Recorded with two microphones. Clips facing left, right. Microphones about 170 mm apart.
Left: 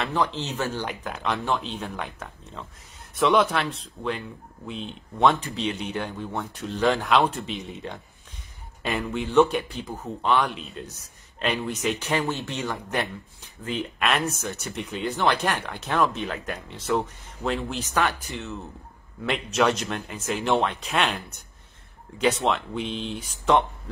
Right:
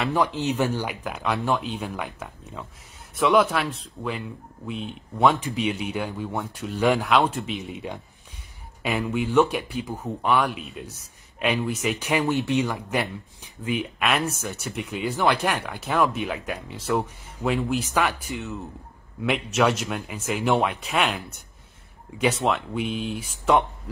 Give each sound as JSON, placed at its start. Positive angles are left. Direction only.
{"t": 0.0, "sound": "speech", "side_deg": -10}